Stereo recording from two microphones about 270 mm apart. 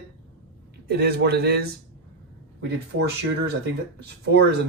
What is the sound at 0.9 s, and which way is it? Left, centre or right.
Speech, right.